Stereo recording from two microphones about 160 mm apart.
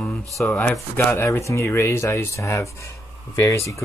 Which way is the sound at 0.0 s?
5° left (ahead or behind).